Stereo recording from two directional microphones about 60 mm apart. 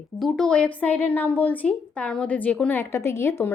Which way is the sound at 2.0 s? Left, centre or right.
Centre.